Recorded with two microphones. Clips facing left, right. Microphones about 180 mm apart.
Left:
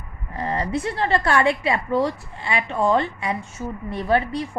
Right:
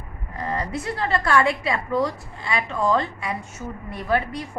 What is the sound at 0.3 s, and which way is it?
A woman's voice, 25° left (ahead or behind).